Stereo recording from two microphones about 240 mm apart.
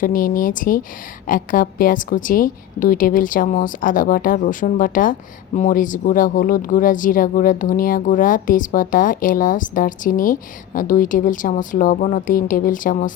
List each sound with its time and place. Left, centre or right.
0.0 s speech: left